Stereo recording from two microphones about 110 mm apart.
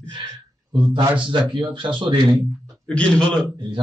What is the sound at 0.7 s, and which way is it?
A man's voice, 45° right (ahead or behind).